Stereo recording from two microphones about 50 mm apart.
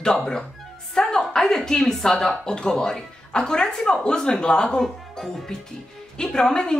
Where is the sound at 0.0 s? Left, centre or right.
Centre.